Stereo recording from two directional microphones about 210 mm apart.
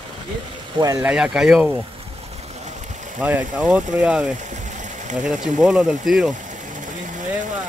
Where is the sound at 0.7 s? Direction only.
15° right (ahead or behind).